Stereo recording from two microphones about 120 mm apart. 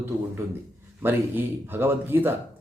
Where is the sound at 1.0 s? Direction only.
15° right (ahead or behind).